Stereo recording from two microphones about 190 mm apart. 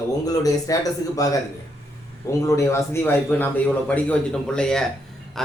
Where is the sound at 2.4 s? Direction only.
15° left (ahead or behind).